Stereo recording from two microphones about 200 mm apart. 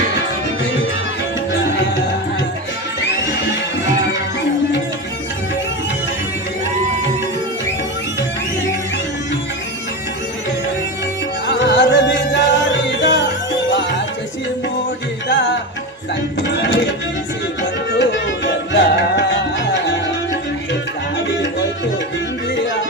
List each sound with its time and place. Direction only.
11.4 s music: 60° left (ahead or behind)
16.6 s music: 65° left (ahead or behind)
17.9 s music: 60° left (ahead or behind)